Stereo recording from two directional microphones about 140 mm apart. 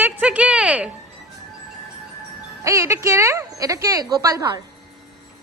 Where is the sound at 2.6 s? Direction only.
20° right (ahead or behind).